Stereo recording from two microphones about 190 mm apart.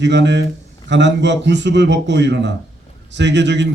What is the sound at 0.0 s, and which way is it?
Speech, 65° right (ahead or behind).